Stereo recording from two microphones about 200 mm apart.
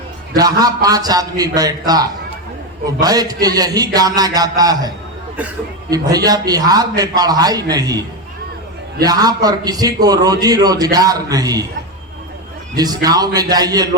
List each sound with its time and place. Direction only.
0.3 s a man's voice: 20° right (ahead or behind)
5.9 s a man's voice: 20° right (ahead or behind)
9.0 s a man's voice: 20° right (ahead or behind)
12.7 s a man's voice: 20° right (ahead or behind)